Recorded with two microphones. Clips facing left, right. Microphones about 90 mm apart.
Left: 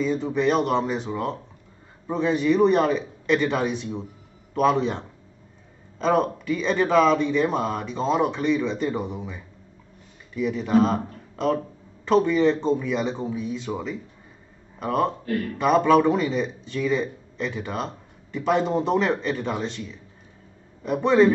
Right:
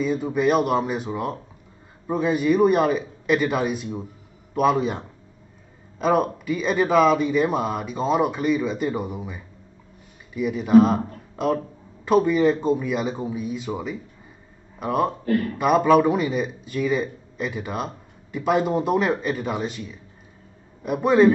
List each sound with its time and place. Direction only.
0.0 s speech: 5° right (ahead or behind)